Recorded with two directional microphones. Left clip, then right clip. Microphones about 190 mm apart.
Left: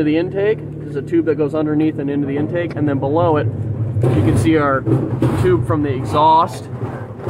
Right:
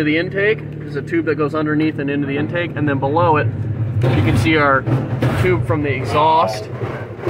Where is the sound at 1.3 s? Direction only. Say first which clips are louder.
Left 1 dB; 60° right (ahead or behind).